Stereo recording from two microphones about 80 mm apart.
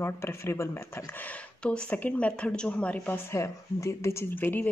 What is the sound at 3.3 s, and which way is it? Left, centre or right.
Speech, left.